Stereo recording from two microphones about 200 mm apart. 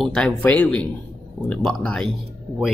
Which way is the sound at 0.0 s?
Centre (ahead or behind).